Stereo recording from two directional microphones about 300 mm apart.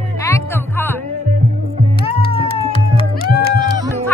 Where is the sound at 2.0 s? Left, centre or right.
Centre.